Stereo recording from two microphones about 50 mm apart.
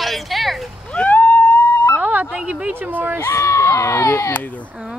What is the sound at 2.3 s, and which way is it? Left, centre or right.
Speech, right.